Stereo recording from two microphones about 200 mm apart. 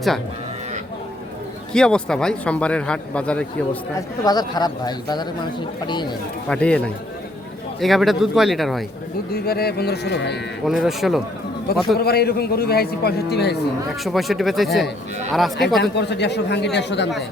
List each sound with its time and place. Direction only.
1.7 s a man's voice: 5° left (ahead or behind)
4.2 s speech: 20° left (ahead or behind)
6.5 s a man's voice: 5° left (ahead or behind)
9.3 s a man's voice: 50° left (ahead or behind)
10.7 s a man's voice: centre (ahead or behind)
11.9 s a man's voice: 50° left (ahead or behind)
14.0 s a man's voice: centre (ahead or behind)
15.8 s a man's voice: 60° left (ahead or behind)